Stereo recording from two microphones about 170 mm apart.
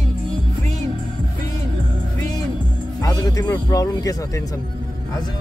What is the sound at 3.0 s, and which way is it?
Speech, 20° left (ahead or behind).